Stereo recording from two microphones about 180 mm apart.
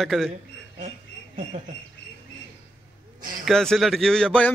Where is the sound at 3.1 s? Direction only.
50° right (ahead or behind).